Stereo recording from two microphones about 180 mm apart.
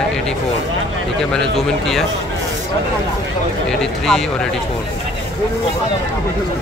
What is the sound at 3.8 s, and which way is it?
Speech, 5° left (ahead or behind).